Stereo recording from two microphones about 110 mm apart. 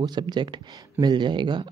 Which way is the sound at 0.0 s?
40° right (ahead or behind).